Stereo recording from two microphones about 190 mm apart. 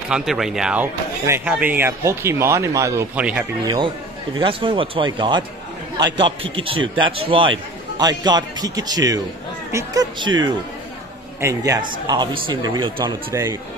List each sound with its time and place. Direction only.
0.1 s speech: centre (ahead or behind)
3.6 s speech: 25° right (ahead or behind)
11.4 s speech: 15° right (ahead or behind)